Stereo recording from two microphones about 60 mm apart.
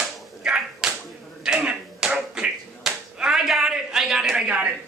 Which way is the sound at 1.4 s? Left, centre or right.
Centre.